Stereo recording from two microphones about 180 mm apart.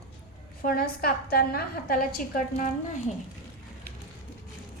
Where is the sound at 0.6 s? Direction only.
55° left (ahead or behind).